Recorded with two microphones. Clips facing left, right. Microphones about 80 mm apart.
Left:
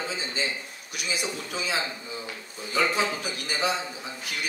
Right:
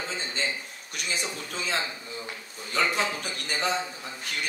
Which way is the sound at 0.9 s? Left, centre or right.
Centre.